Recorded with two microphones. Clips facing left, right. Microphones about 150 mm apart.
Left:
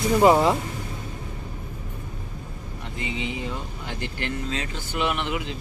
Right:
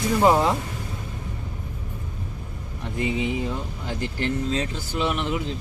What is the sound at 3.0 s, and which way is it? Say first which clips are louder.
Speech: right 6 dB; 50° right (ahead or behind).